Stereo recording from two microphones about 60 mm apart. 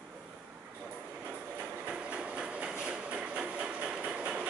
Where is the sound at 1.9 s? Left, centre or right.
Centre.